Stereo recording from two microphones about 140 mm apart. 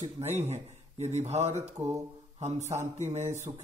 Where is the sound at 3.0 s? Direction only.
55° right (ahead or behind).